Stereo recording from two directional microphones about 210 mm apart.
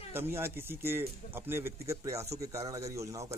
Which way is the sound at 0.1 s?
10° right (ahead or behind).